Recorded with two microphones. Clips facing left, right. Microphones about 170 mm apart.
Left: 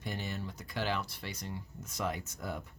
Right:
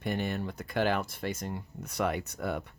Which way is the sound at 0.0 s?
60° right (ahead or behind).